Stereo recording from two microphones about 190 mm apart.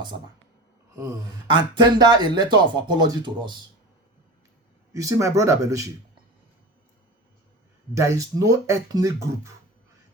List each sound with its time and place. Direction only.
1.5 s speech: 25° right (ahead or behind)
4.9 s speech: 15° right (ahead or behind)
7.9 s speech: 15° right (ahead or behind)